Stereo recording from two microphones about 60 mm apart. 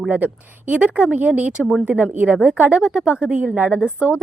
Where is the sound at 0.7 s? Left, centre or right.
Right.